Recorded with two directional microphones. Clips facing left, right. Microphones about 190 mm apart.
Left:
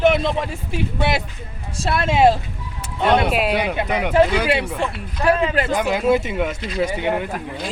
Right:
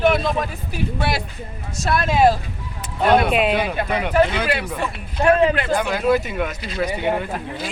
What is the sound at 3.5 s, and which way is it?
Speech, 20° left (ahead or behind).